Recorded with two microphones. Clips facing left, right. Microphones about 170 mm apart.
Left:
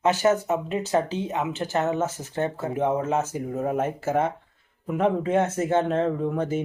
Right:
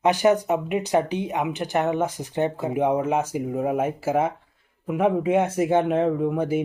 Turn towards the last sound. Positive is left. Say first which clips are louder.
# right 3 dB
turn(degrees=-10)  # may be behind; listen again after turning